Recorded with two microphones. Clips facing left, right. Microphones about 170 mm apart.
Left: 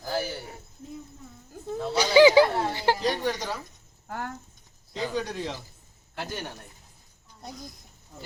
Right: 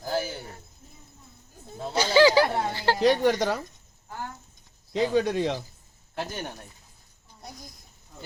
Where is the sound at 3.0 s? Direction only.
60° right (ahead or behind).